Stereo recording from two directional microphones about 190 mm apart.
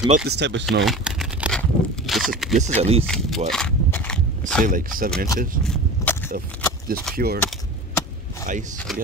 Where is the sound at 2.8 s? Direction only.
30° right (ahead or behind).